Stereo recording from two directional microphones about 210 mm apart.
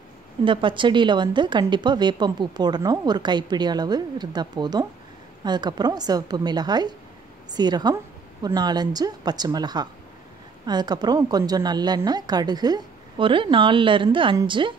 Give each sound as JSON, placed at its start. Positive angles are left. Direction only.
{"t": 0.5, "sound": "a woman's voice", "side_deg": -25}